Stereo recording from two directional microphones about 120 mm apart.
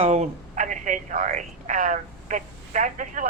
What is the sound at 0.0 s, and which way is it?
Speech, 65° right (ahead or behind).